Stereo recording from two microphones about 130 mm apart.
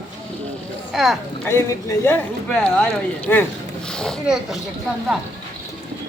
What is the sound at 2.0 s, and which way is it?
Speech, 15° left (ahead or behind).